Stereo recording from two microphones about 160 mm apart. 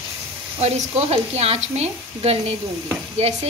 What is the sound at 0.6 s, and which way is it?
Speech, 40° right (ahead or behind).